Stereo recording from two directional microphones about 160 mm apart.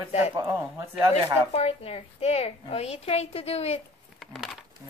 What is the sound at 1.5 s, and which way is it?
Speech, 40° left (ahead or behind).